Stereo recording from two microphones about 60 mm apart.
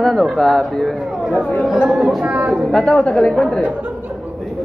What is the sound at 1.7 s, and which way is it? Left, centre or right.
Speech, centre.